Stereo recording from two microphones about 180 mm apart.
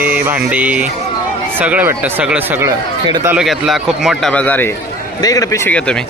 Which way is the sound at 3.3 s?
5° right (ahead or behind).